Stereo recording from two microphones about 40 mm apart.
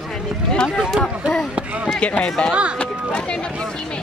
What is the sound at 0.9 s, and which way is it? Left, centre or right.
Speech, centre.